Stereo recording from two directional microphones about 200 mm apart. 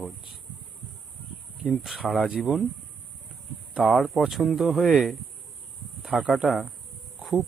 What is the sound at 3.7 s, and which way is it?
Speech, centre (ahead or behind).